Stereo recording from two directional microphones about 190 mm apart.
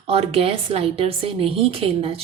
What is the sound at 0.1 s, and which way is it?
A woman's voice, 30° right (ahead or behind).